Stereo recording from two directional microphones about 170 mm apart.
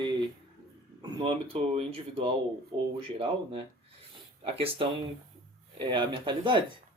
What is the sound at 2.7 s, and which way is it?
Speech, 25° right (ahead or behind).